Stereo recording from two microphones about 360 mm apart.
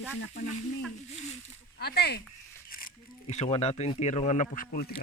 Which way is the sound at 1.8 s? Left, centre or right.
Left.